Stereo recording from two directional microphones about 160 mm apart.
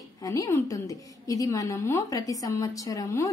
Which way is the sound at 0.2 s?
20° left (ahead or behind).